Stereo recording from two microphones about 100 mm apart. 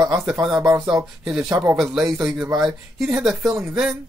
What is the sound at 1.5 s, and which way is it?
Speech, 35° right (ahead or behind).